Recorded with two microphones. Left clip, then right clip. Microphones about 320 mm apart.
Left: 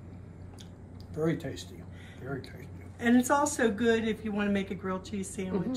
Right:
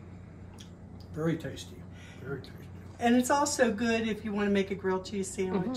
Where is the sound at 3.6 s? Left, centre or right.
Right.